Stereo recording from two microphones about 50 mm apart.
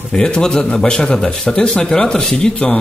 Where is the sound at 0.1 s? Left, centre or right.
Centre.